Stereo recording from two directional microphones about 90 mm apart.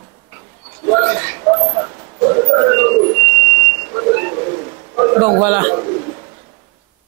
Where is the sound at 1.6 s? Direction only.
25° right (ahead or behind).